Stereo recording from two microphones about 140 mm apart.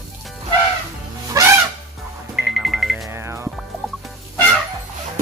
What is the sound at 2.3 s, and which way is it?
Music, centre (ahead or behind).